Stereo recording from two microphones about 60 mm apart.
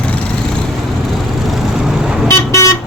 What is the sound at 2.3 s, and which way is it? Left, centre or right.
Vehicle, left.